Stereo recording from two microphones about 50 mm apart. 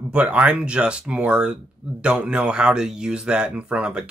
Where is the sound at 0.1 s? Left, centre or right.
Right.